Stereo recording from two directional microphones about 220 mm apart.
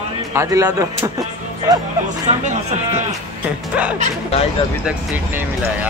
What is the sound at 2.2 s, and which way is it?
Speech, 30° right (ahead or behind).